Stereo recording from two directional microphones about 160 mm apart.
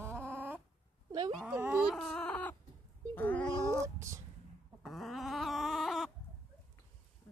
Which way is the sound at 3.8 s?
20° right (ahead or behind).